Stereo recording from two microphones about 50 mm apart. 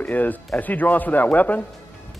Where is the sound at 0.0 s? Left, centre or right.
Left.